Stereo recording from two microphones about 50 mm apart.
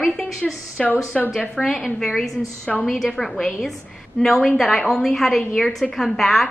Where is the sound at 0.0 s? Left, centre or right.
Centre.